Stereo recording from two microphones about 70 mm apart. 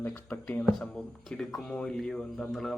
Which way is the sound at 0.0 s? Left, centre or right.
Left.